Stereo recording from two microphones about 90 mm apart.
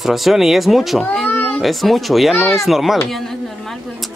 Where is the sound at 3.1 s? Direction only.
5° left (ahead or behind).